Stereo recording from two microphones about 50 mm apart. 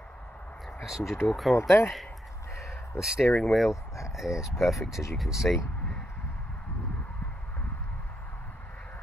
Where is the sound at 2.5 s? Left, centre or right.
Left.